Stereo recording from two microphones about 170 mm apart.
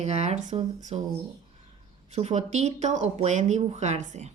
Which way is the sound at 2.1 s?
40° right (ahead or behind).